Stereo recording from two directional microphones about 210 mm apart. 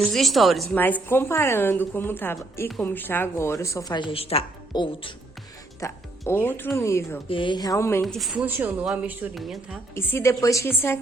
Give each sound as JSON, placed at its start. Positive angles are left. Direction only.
{"t": 0.0, "sound": "a woman's voice", "side_deg": 0}
{"t": 5.8, "sound": "a woman's voice", "side_deg": 10}
{"t": 7.3, "sound": "a woman's voice", "side_deg": 25}
{"t": 8.0, "sound": "a woman's voice", "side_deg": 0}
{"t": 9.9, "sound": "a woman's voice", "side_deg": 10}